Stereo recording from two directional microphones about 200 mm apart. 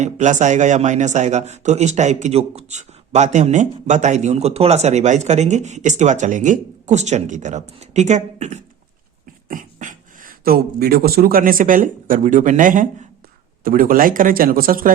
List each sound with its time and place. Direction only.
0.0 s speech: 35° right (ahead or behind)